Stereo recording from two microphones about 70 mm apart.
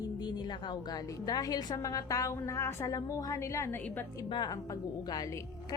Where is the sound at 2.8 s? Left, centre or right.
Left.